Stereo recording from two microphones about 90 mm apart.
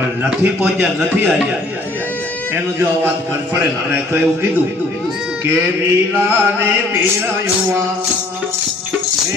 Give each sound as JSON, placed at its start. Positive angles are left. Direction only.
{"t": 0.4, "sound": "chant", "side_deg": -20}
{"t": 2.5, "sound": "chant", "side_deg": -20}